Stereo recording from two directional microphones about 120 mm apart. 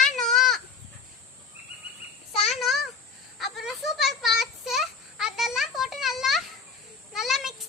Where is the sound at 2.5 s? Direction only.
Centre (ahead or behind).